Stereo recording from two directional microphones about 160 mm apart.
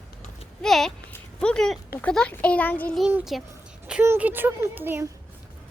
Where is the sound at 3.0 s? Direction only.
5° right (ahead or behind).